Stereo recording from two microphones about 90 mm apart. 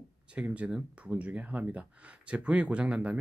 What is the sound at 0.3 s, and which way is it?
Speech, 15° right (ahead or behind).